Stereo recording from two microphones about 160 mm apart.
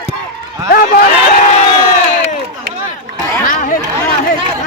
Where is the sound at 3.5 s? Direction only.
55° left (ahead or behind).